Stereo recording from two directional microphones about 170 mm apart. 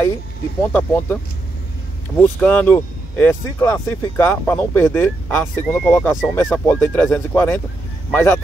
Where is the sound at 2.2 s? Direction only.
10° left (ahead or behind).